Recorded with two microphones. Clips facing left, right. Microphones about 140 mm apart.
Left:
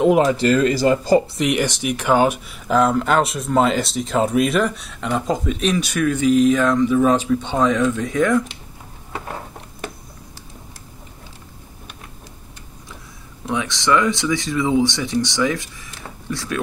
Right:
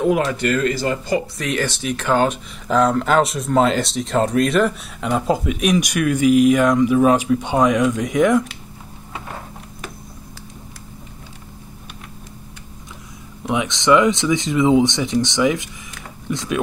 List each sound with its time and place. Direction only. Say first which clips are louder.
0.0 s speech: left 3 dB; 20° left (ahead or behind)
1.4 s speech: left 3 dB; 15° left (ahead or behind); by 8.5 s 20° right (ahead or behind)
13.5 s speech: right 3 dB; 20° right (ahead or behind)